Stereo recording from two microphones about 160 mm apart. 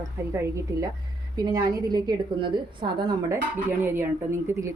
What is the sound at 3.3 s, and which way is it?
Speech, 15° right (ahead or behind).